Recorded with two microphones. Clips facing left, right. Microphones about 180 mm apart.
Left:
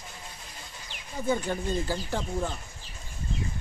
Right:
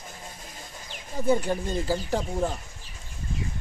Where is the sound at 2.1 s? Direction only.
35° right (ahead or behind).